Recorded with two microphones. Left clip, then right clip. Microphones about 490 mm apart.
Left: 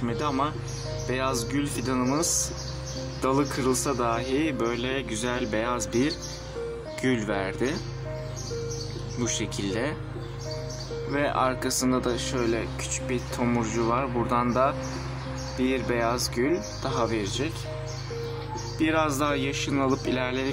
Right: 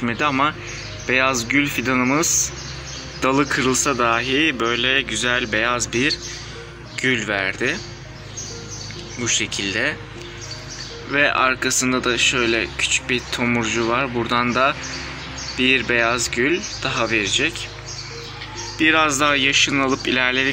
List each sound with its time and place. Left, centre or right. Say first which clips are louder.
0.0 s speech: right 8 dB; left
9.2 s speech: right 9 dB; left
11.1 s speech: right 8 dB; left
18.8 s speech: right 9 dB; left